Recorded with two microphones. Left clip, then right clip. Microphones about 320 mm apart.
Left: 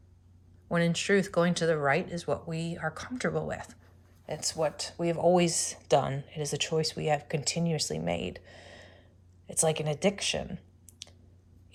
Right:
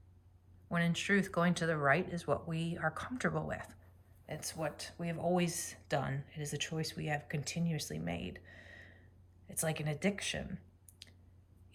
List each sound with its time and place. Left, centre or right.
0.7 s speech: centre